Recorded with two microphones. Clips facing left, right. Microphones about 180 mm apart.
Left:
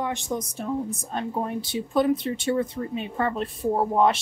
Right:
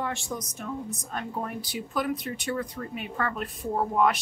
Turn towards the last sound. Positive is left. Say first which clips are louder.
# left 4 dB
turn(degrees=30)  # may be behind; listen again after turning